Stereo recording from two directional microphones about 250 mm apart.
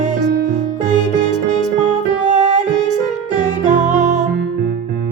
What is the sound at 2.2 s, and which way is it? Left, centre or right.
Music, right.